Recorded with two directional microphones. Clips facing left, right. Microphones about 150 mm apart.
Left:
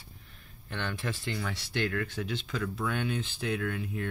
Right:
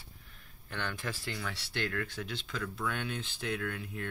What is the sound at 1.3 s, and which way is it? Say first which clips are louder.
Speech: left 4 dB; centre (ahead or behind).